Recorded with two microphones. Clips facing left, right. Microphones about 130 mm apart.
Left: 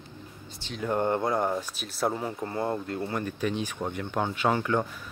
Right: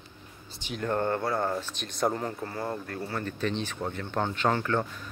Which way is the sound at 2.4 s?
25° left (ahead or behind).